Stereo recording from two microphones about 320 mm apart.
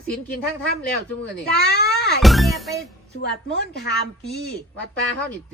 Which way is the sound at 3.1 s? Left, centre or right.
Left.